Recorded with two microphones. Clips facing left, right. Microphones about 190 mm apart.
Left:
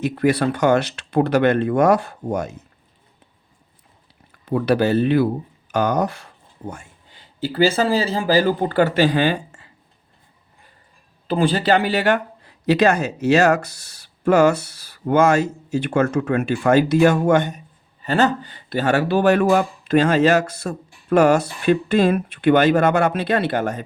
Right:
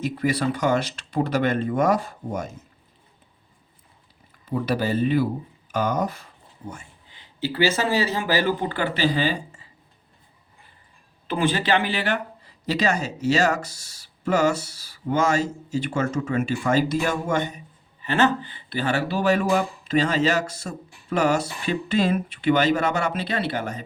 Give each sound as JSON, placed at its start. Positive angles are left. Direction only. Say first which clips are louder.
{"t": 0.0, "sound": "speech", "louder": "left 5 dB", "side_deg": 65}
{"t": 4.4, "sound": "speech", "louder": "left 6 dB", "side_deg": 70}
{"t": 7.5, "sound": "speech", "louder": "left 5 dB", "side_deg": 30}
{"t": 11.3, "sound": "speech", "louder": "left 4 dB", "side_deg": 35}
{"t": 12.6, "sound": "speech", "louder": "left 7 dB", "side_deg": 60}
{"t": 18.0, "sound": "speech", "louder": "left 3 dB", "side_deg": 35}